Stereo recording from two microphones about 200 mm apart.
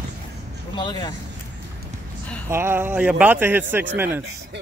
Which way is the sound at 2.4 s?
10° right (ahead or behind).